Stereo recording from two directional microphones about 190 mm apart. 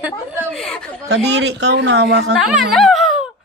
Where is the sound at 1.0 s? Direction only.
80° right; by 2.3 s 60° right (ahead or behind).